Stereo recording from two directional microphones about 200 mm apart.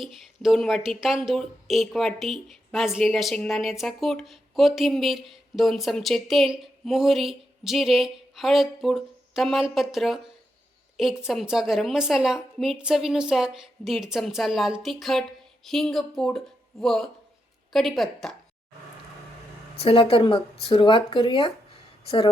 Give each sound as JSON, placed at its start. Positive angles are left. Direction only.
{"t": 0.0, "sound": "a woman's voice", "side_deg": 0}
{"t": 19.8, "sound": "speech", "side_deg": 30}